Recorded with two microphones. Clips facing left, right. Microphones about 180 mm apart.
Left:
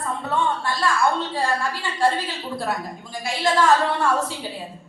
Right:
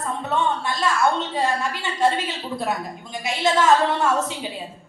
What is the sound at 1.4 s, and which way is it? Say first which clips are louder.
A woman's voice: right 1 dB; 20° right (ahead or behind).